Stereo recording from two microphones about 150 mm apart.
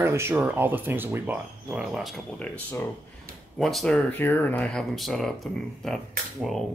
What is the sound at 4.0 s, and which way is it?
Speech, 10° left (ahead or behind).